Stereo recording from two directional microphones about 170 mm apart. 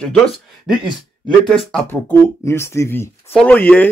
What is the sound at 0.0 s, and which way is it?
Speech, centre (ahead or behind).